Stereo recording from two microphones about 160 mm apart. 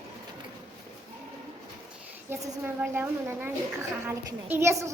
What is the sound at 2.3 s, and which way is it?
A child's voice, 15° right (ahead or behind).